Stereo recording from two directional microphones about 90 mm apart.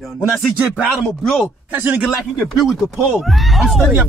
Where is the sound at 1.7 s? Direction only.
20° right (ahead or behind).